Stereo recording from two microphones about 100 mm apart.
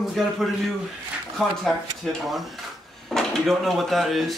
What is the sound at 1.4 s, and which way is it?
Speech, centre (ahead or behind).